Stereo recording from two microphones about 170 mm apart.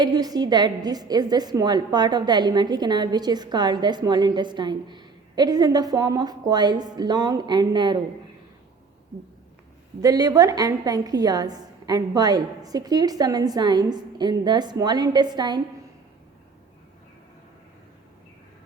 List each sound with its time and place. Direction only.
0.0 s a woman's voice: 20° right (ahead or behind)
10.0 s a woman's voice: 20° right (ahead or behind)